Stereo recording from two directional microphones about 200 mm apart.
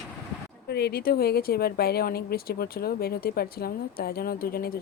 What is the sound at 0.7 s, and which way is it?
Speech, 55° left (ahead or behind).